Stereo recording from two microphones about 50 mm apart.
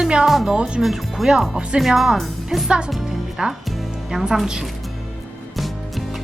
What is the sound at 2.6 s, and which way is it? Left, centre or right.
Speech, centre.